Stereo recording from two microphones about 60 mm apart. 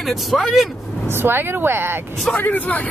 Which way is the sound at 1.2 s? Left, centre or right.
Right.